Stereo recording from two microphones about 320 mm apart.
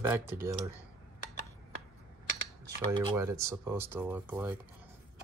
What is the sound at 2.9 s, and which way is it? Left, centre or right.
Speech, centre.